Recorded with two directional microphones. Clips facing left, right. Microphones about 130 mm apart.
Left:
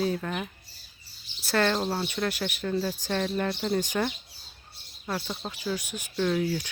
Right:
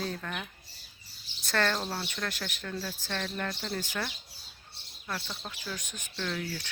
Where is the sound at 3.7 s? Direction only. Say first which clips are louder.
Left 8 dB; 20° left (ahead or behind).